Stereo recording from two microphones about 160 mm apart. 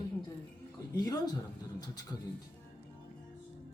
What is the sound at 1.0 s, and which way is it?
Speech, 25° left (ahead or behind).